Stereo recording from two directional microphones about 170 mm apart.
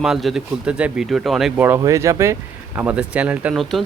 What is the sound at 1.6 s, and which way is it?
Speech, 15° right (ahead or behind).